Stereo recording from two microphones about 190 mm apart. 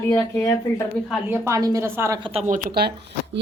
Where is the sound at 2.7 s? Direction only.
60° right (ahead or behind).